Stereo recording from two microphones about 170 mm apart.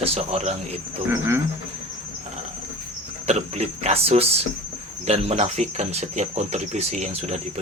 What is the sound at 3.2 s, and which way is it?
Speech, 40° right (ahead or behind).